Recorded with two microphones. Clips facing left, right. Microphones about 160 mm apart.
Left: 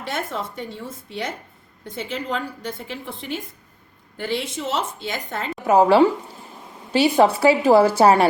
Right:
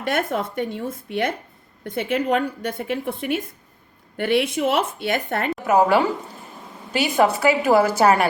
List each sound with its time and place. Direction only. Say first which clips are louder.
0.0 s a woman's voice: right 5 dB; 60° right (ahead or behind)
5.6 s a woman's voice: left 3 dB; 30° left (ahead or behind)